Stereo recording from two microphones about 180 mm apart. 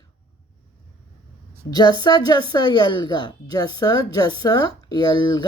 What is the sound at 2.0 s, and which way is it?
Speech, 25° left (ahead or behind).